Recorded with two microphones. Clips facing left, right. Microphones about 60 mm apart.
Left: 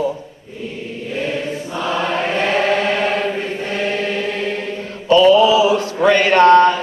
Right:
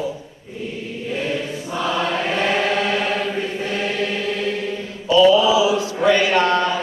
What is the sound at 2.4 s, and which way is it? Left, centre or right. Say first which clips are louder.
Chant: left 3 dB; left.